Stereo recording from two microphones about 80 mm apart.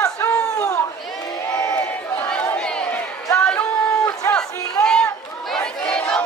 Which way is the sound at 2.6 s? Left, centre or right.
Centre.